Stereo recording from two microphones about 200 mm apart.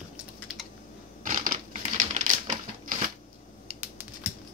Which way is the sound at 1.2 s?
40° right (ahead or behind).